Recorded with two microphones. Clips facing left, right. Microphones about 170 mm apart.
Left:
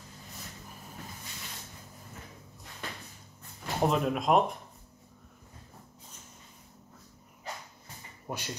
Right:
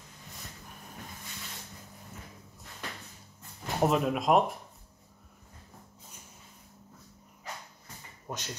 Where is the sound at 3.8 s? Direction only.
Centre (ahead or behind).